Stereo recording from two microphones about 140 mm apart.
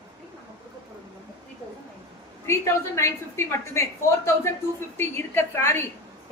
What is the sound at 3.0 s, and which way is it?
Speech, 20° left (ahead or behind).